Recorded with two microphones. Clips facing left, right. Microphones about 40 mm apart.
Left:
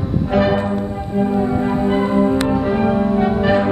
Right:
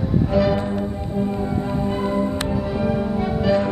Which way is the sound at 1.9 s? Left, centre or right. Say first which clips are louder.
Left 7 dB; left.